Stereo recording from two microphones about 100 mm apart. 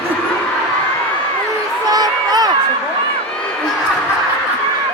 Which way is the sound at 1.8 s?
40° right (ahead or behind).